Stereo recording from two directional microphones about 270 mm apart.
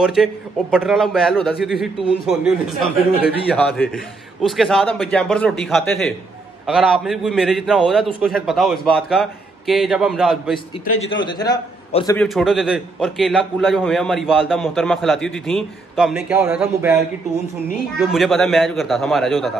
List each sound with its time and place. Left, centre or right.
0.0 s a man's voice: centre
11.0 s a man's voice: centre
12.2 s a man's voice: centre